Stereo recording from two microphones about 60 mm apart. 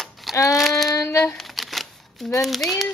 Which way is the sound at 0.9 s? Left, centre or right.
Left.